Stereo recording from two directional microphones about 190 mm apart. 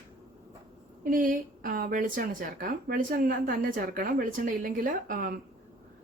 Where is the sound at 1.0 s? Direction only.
45° right (ahead or behind).